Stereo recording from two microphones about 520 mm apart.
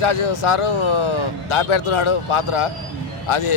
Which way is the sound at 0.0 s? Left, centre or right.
Left.